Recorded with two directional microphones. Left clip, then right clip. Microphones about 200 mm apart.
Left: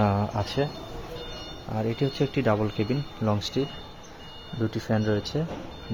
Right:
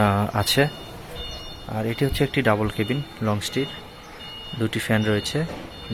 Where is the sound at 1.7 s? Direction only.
Centre (ahead or behind).